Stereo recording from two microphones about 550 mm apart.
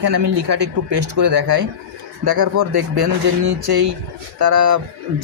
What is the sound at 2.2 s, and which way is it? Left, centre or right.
Speech, right.